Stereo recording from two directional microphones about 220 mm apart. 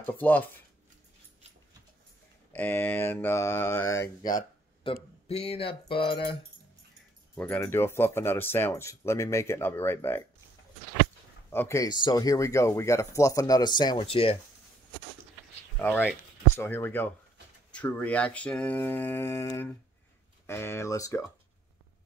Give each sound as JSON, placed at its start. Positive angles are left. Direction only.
{"t": 0.0, "sound": "speech", "side_deg": 10}
{"t": 2.5, "sound": "speech", "side_deg": 10}
{"t": 7.3, "sound": "speech", "side_deg": 10}
{"t": 11.5, "sound": "speech", "side_deg": 10}
{"t": 15.8, "sound": "speech", "side_deg": 10}